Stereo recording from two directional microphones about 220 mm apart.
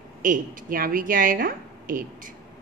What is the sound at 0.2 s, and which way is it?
A woman's voice, 35° right (ahead or behind).